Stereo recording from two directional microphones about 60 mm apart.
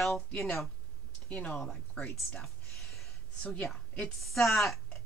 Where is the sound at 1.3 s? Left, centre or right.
Centre.